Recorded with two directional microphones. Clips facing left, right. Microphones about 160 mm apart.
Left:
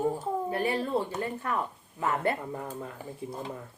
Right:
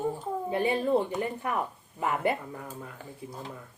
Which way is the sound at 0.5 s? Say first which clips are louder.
Right 5 dB; 20° right (ahead or behind).